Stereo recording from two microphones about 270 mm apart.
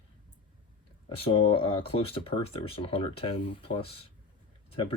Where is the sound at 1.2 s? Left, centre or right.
Centre.